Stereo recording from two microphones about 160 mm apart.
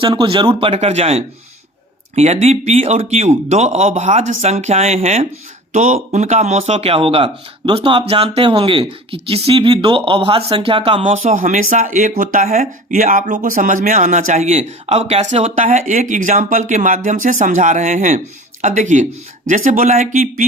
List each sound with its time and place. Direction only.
0.0 s speech: 30° right (ahead or behind)
11.1 s speech: 55° right (ahead or behind)